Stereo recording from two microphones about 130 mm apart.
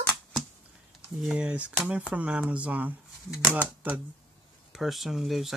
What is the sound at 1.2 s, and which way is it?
Speech, 10° right (ahead or behind).